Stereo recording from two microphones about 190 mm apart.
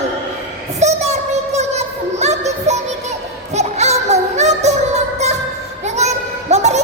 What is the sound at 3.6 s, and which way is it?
Music, 35° right (ahead or behind).